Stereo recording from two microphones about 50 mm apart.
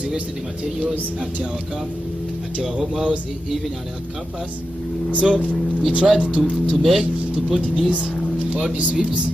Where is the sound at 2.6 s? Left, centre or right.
Centre.